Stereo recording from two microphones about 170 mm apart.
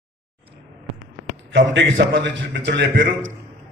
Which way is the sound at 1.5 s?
90° right.